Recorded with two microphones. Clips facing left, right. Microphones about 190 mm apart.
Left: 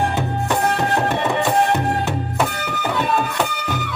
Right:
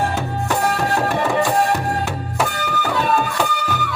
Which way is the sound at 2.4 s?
Centre (ahead or behind).